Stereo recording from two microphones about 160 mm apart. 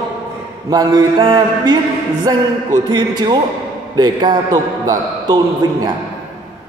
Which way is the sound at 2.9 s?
30° right (ahead or behind).